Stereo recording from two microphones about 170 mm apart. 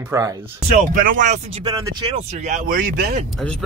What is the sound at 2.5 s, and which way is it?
Speech, 50° right (ahead or behind).